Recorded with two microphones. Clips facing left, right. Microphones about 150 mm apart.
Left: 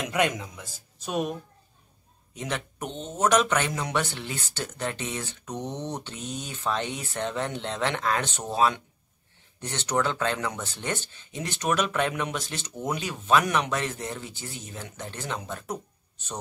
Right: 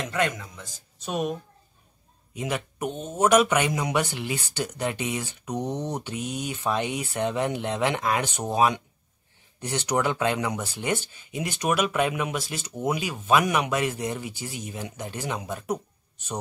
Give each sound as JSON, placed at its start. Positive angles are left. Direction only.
{"t": 0.0, "sound": "a man's voice", "side_deg": 15}
{"t": 0.9, "sound": "a woman's voice", "side_deg": 0}
{"t": 2.3, "sound": "speech", "side_deg": -5}